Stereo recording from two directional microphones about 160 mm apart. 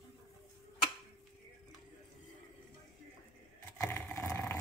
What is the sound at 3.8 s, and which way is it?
Vehicle, 15° left (ahead or behind).